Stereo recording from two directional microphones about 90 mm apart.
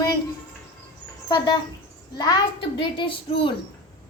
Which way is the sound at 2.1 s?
45° left (ahead or behind).